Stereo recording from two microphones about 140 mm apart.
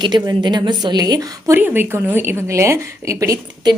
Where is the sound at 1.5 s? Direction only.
15° right (ahead or behind).